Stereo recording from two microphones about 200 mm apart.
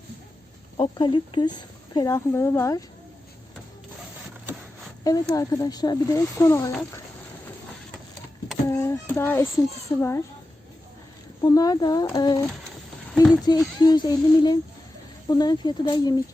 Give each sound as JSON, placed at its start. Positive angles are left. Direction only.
{"t": 0.8, "sound": "speech", "side_deg": 25}
{"t": 5.0, "sound": "speech", "side_deg": 15}
{"t": 8.7, "sound": "child singing", "side_deg": 15}
{"t": 10.0, "sound": "speech", "side_deg": 15}
{"t": 11.4, "sound": "speech", "side_deg": 20}
{"t": 13.5, "sound": "speech", "side_deg": 20}